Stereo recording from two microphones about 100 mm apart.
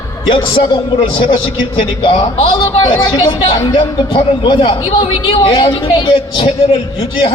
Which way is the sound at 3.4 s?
60° left (ahead or behind).